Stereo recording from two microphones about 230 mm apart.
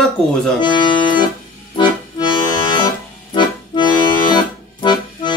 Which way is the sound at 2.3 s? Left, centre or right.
Centre.